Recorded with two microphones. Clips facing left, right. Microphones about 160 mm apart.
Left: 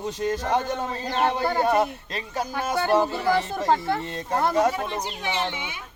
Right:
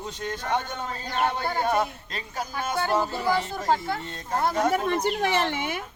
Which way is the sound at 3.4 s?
30° left (ahead or behind).